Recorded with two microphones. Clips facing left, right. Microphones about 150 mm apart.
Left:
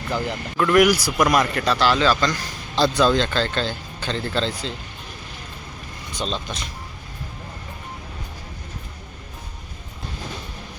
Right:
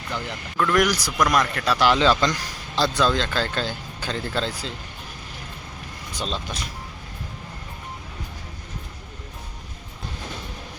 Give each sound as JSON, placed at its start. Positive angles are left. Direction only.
{"t": 0.5, "sound": "speech", "side_deg": 5}
{"t": 1.8, "sound": "speech", "side_deg": -20}
{"t": 2.7, "sound": "speech", "side_deg": 0}
{"t": 6.1, "sound": "speech", "side_deg": -5}